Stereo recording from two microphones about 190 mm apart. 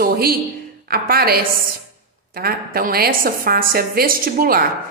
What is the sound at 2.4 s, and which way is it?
A woman's voice, 50° right (ahead or behind).